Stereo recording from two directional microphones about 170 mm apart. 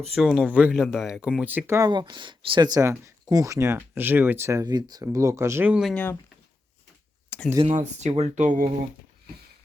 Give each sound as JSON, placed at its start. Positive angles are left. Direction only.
{"t": 0.1, "sound": "speech", "side_deg": 0}
{"t": 1.9, "sound": "speech", "side_deg": -25}
{"t": 5.9, "sound": "speech", "side_deg": 10}
{"t": 7.3, "sound": "a sound", "side_deg": 5}
{"t": 7.7, "sound": "speech", "side_deg": -45}